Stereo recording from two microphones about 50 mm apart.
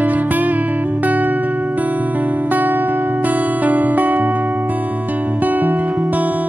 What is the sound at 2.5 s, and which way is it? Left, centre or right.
Music, right.